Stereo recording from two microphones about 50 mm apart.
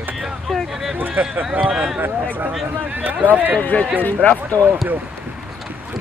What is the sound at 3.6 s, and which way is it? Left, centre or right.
Speech, left.